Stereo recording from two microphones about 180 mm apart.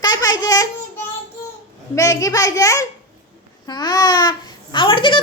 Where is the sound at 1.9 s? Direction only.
20° left (ahead or behind).